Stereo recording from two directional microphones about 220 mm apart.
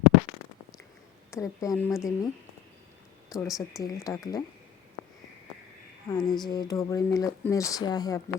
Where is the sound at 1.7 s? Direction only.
Centre (ahead or behind).